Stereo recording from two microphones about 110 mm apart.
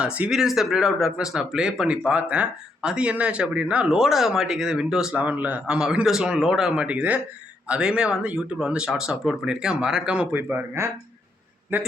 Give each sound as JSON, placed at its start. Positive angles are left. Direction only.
{"t": 0.0, "sound": "speech", "side_deg": -10}
{"t": 10.3, "sound": "speech", "side_deg": -20}